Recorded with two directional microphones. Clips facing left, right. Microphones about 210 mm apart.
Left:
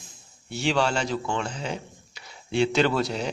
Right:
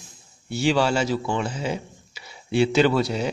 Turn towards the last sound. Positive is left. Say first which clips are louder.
# right 3 dB
turn(degrees=0)  # may be behind; listen again after turning